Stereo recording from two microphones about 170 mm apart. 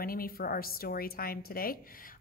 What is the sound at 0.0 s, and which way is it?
A woman's voice, 60° left (ahead or behind).